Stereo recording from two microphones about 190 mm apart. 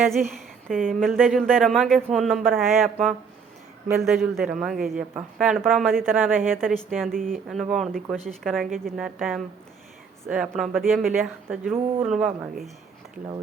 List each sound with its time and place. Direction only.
0.1 s a woman's voice: centre (ahead or behind)
6.1 s a woman's voice: 10° right (ahead or behind)
6.6 s speech: centre (ahead or behind)
7.1 s speech: 45° right (ahead or behind)
7.4 s speech: centre (ahead or behind)